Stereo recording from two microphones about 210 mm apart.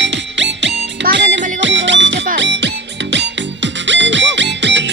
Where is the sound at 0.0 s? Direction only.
55° right (ahead or behind).